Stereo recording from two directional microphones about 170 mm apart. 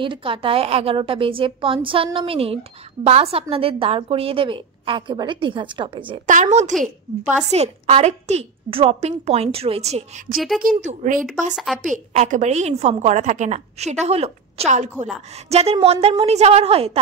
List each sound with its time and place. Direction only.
0.0 s a woman's voice: 30° right (ahead or behind)
6.2 s a woman's voice: 45° right (ahead or behind)
11.5 s a woman's voice: centre (ahead or behind)
11.8 s a woman's voice: 45° right (ahead or behind)